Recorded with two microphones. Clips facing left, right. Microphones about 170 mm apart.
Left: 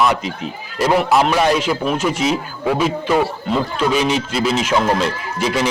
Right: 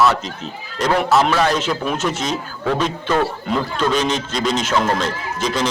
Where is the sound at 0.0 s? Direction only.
10° left (ahead or behind).